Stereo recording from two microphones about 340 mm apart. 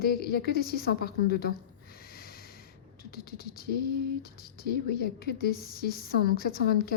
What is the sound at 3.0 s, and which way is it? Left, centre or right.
Speech, left.